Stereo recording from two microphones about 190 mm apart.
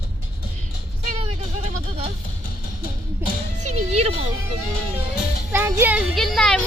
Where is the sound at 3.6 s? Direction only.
35° right (ahead or behind).